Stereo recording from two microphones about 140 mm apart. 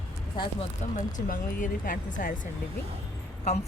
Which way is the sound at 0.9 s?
70° left (ahead or behind).